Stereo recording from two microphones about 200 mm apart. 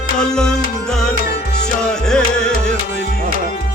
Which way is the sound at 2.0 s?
5° left (ahead or behind).